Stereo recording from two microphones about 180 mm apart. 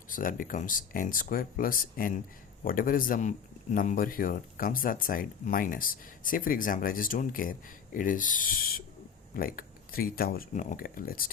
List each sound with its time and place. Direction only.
0.1 s speech: 50° left (ahead or behind)